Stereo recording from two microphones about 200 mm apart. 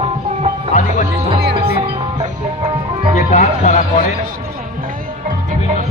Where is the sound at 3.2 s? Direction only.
35° left (ahead or behind).